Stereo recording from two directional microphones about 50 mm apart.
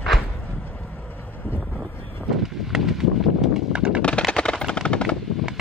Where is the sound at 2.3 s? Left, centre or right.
Centre.